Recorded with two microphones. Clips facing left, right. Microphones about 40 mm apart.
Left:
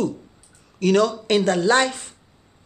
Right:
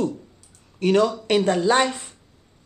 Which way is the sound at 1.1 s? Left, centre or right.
Centre.